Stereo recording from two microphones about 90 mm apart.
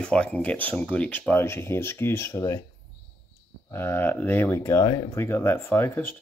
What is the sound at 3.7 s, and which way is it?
Speech, 25° left (ahead or behind).